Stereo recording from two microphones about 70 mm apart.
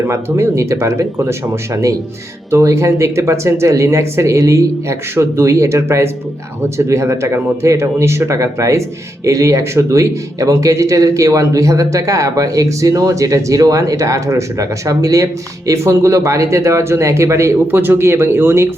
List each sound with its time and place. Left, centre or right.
0.1 s speech: right
17.7 s speech: right